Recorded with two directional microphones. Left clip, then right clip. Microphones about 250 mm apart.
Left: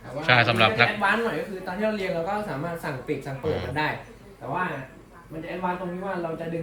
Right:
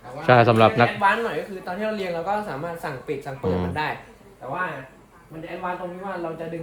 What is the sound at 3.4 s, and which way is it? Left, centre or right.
Speech, right.